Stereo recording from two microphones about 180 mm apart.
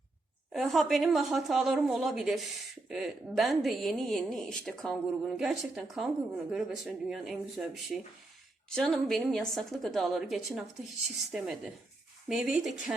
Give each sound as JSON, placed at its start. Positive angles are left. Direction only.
{"t": 0.5, "sound": "a woman's voice", "side_deg": 0}